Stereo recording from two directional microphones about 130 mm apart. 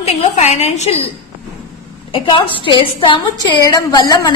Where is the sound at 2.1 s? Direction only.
40° left (ahead or behind).